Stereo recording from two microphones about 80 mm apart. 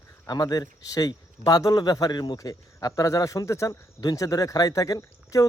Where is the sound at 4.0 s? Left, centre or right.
Left.